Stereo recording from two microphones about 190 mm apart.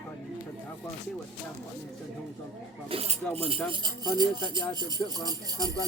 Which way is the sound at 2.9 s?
30° right (ahead or behind).